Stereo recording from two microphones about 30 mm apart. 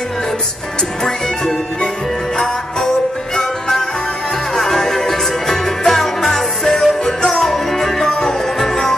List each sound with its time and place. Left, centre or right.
2.3 s music: centre